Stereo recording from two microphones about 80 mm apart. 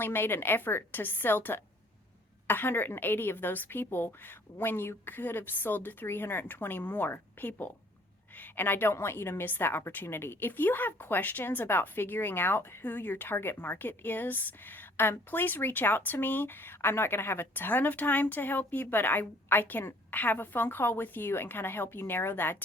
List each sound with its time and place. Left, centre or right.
0.0 s a woman's voice: left